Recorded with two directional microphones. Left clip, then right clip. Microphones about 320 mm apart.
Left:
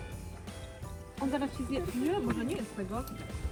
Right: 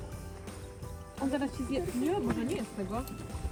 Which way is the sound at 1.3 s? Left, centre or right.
Centre.